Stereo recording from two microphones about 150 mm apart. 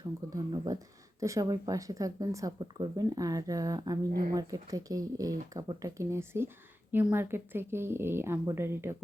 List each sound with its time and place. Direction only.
0.0 s a woman's voice: 30° right (ahead or behind)